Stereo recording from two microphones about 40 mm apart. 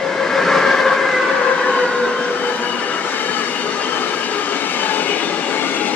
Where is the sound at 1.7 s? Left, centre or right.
Left.